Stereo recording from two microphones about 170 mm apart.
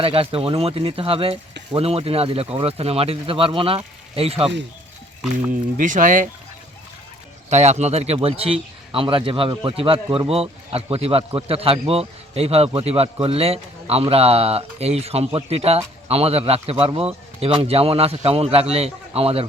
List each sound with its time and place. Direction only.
0.0 s a man's voice: 35° right (ahead or behind)
5.7 s speech: 50° right (ahead or behind)
7.5 s a man's voice: 40° right (ahead or behind)